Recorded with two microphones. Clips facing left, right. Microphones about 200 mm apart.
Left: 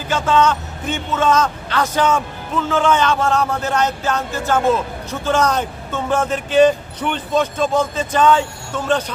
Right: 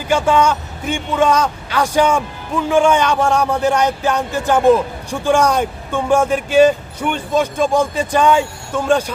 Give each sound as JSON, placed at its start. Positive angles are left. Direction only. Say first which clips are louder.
{"t": 0.1, "sound": "a man's voice", "louder": "right 2 dB", "side_deg": -10}